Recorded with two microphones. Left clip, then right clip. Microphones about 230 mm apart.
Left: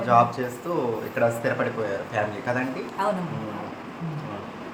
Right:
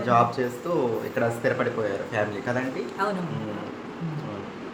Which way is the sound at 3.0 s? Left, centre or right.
Centre.